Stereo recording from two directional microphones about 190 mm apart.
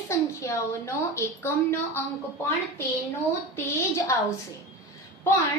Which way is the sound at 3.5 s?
15° left (ahead or behind).